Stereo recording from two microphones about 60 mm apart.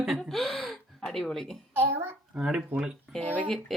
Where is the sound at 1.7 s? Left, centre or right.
Right.